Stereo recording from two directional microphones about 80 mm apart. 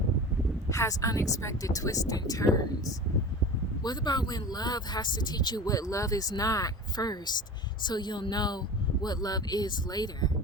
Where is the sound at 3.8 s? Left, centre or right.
Left.